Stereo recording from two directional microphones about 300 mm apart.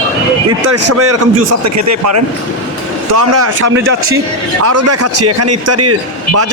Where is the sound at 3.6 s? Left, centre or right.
Right.